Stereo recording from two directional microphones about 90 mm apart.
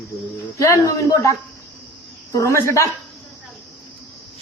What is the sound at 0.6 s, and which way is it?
Speech, 45° left (ahead or behind).